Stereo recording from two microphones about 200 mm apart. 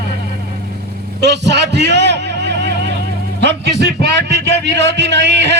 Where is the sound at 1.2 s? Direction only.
60° right (ahead or behind).